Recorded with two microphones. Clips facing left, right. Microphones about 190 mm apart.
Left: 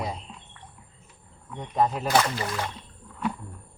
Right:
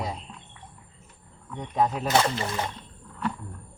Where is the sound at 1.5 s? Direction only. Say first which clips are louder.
Even; centre (ahead or behind).